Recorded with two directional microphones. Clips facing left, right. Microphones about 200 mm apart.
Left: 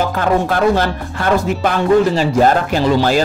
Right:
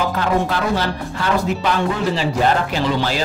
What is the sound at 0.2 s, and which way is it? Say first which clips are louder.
Speech: left 7 dB; 50° left (ahead or behind).